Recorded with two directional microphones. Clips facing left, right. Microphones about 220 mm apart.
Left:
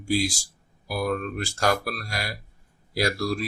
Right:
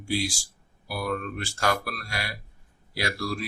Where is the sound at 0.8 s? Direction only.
40° left (ahead or behind).